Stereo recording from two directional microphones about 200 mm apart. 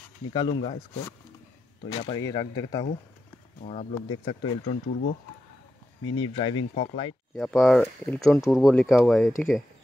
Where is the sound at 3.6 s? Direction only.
35° left (ahead or behind).